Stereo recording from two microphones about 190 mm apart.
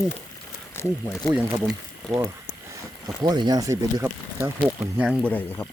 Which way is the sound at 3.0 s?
20° right (ahead or behind).